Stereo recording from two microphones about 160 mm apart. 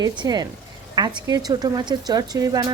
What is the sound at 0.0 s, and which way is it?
Speech, 25° right (ahead or behind).